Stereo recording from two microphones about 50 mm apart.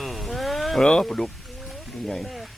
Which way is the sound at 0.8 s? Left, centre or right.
Centre.